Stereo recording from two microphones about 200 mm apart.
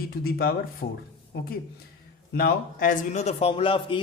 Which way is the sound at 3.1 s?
30° left (ahead or behind).